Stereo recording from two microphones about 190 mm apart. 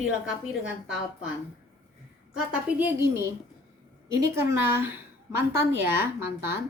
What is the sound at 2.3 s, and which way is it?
A woman's voice, 10° right (ahead or behind).